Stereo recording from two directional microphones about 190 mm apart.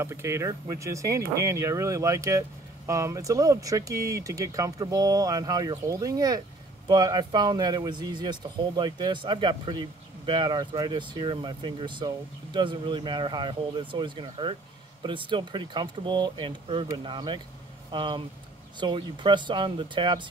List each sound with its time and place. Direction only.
0.0 s speech: 15° right (ahead or behind)